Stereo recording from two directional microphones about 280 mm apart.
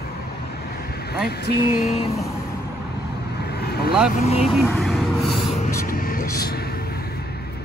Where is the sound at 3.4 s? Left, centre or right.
Left.